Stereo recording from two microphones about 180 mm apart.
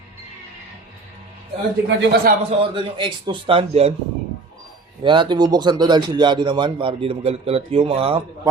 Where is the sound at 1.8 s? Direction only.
70° right (ahead or behind).